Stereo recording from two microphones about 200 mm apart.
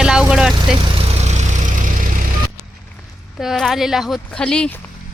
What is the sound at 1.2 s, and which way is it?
Vehicle, 35° right (ahead or behind).